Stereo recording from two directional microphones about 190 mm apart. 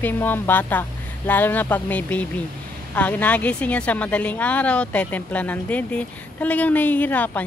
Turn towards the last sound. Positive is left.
turn(degrees=10)  # may be behind; listen again after turning